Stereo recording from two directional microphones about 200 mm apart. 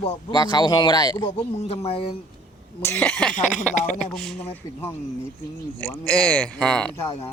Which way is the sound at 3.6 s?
40° left (ahead or behind).